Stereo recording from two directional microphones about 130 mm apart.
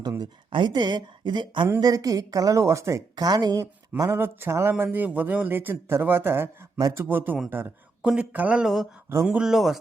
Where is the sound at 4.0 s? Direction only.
20° right (ahead or behind).